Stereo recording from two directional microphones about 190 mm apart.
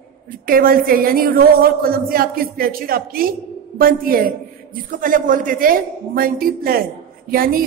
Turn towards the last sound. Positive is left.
turn(degrees=-50)  # may be behind; listen again after turning